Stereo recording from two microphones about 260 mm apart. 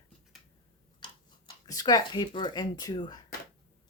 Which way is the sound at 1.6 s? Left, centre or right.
Centre.